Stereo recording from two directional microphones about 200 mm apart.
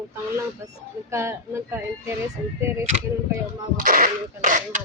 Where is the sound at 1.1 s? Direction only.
15° right (ahead or behind).